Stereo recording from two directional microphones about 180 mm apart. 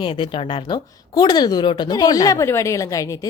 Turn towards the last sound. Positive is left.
turn(degrees=20)  # may be behind; listen again after turning